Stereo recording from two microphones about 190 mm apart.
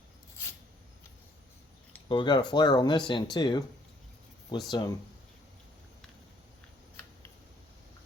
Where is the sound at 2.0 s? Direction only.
25° left (ahead or behind).